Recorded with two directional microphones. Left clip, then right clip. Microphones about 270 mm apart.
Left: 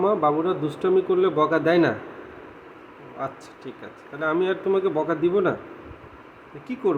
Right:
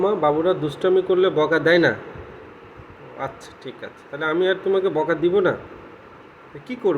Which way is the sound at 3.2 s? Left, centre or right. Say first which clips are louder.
Right 1 dB; centre.